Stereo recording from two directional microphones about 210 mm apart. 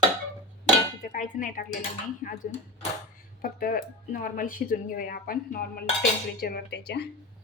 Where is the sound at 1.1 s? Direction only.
40° left (ahead or behind).